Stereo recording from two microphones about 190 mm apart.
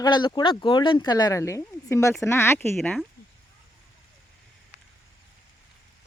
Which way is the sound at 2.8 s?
5° left (ahead or behind).